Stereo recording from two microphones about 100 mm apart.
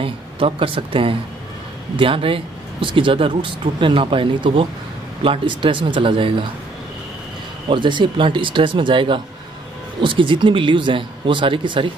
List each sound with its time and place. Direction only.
0.0 s speech: 65° right (ahead or behind)
7.7 s speech: 55° right (ahead or behind)